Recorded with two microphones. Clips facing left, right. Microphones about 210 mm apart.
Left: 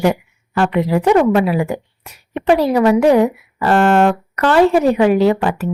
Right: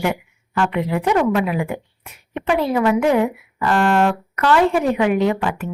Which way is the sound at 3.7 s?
50° left (ahead or behind).